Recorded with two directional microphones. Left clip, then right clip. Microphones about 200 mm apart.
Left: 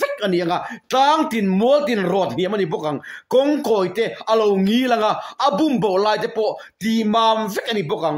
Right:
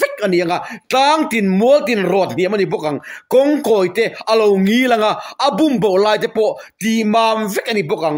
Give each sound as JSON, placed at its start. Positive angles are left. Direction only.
{"t": 0.0, "sound": "speech", "side_deg": -40}